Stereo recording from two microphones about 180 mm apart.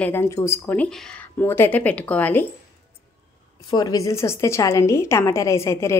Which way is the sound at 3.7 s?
20° left (ahead or behind).